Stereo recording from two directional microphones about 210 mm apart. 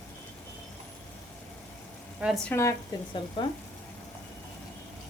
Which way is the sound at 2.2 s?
Centre (ahead or behind).